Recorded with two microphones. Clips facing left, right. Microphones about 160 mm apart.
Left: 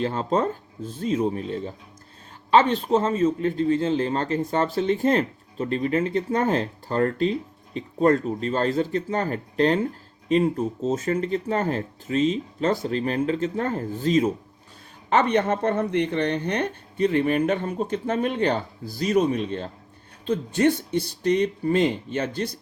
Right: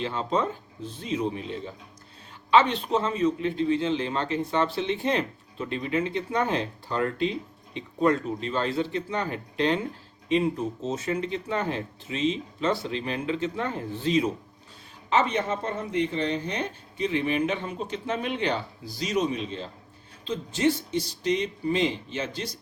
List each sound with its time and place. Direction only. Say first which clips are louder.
0.0 s a man's voice: left 4 dB; 45° left (ahead or behind)
15.1 s a man's voice: left 4 dB; 60° left (ahead or behind)